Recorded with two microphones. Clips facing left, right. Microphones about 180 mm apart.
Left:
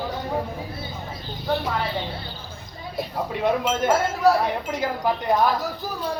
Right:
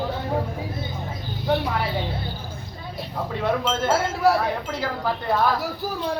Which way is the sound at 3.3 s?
15° left (ahead or behind).